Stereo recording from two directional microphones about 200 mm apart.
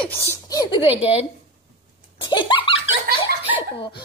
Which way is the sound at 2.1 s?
25° left (ahead or behind).